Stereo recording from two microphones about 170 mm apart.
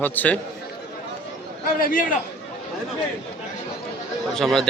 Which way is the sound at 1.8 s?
55° left (ahead or behind).